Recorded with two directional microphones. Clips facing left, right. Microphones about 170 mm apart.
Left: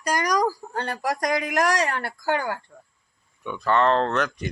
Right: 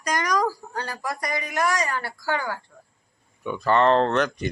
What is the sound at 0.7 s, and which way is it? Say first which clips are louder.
Speech: left 4 dB; 60° left (ahead or behind).